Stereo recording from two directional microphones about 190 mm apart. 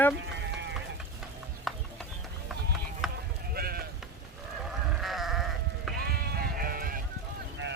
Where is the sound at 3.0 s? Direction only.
Centre (ahead or behind).